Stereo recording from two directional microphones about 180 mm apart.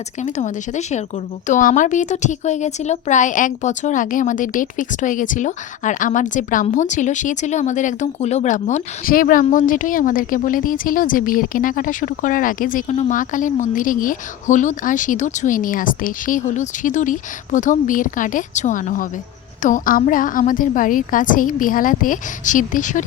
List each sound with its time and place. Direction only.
0.2 s a woman's voice: 40° left (ahead or behind)